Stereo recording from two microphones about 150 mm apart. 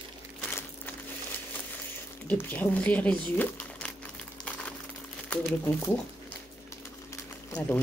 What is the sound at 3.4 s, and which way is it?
Crumpling, 10° left (ahead or behind).